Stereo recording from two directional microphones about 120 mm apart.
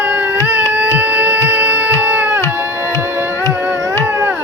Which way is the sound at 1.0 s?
15° right (ahead or behind).